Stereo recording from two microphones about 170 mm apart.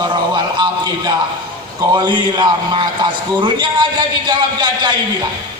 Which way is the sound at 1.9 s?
25° right (ahead or behind).